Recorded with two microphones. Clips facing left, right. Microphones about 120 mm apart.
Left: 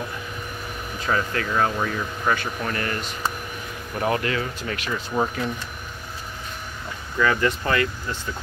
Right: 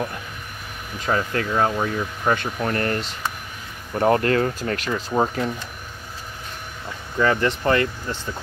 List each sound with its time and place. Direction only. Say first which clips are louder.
1.0 s speech: right 2 dB; 30° right (ahead or behind)
4.0 s speech: right 6 dB; 45° right (ahead or behind)
5.1 s speech: right 3 dB; 30° right (ahead or behind)
7.2 s speech: right 1 dB; 30° right (ahead or behind)